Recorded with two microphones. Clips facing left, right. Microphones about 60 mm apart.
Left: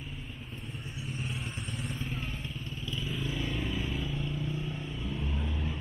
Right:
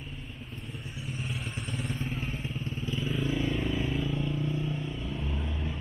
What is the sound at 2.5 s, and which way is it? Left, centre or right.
Motorcycle, right.